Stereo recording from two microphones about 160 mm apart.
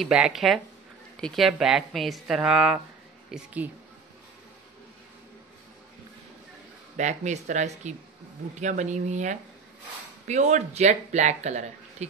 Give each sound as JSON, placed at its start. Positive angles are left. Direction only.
{"t": 0.0, "sound": "a woman's voice", "side_deg": -5}
{"t": 7.0, "sound": "speech", "side_deg": -45}